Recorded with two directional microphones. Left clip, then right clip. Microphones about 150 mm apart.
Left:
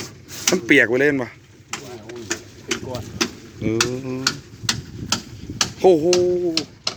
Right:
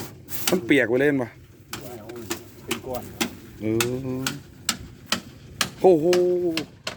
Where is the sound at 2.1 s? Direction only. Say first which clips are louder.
Left 5 dB; 90° right.